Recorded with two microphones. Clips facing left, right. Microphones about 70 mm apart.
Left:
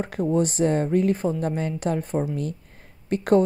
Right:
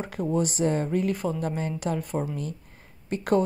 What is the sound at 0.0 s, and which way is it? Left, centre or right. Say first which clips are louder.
Speech: left 4 dB; left.